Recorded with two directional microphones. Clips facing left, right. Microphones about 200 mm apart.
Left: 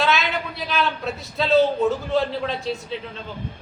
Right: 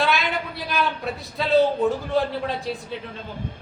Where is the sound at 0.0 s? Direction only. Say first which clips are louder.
Left 1 dB; 15° right (ahead or behind).